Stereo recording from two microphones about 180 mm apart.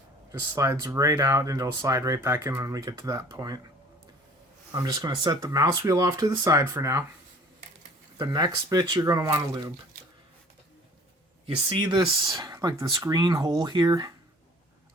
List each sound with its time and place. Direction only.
0.3 s speech: 20° right (ahead or behind)
4.7 s speech: 20° right (ahead or behind)
8.2 s speech: 25° right (ahead or behind)
11.8 s speech: 25° right (ahead or behind)